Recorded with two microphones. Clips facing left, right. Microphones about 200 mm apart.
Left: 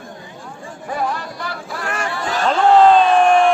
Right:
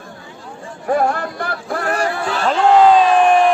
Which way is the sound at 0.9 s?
55° right (ahead or behind).